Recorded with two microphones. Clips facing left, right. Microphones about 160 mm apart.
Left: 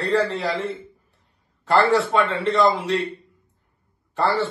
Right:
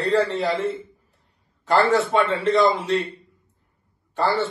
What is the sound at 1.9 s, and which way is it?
A man's voice, centre (ahead or behind).